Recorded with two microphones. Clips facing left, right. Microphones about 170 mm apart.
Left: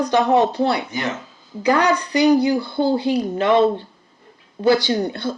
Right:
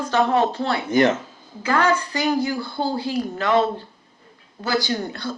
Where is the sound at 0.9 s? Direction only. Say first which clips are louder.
Right 8 dB; 50° right (ahead or behind).